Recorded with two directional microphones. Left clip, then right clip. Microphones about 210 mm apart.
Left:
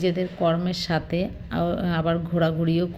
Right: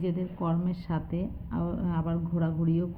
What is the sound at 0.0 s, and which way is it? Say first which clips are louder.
Speech: left 10 dB; 15° left (ahead or behind).